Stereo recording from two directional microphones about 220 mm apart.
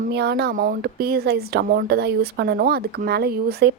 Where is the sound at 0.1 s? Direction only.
50° right (ahead or behind).